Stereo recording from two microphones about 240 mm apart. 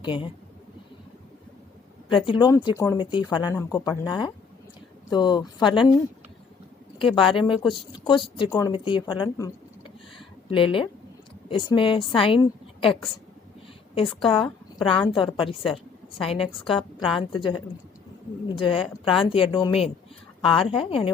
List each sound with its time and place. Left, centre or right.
0.0 s speech: left
2.0 s speech: left
7.3 s a woman's voice: left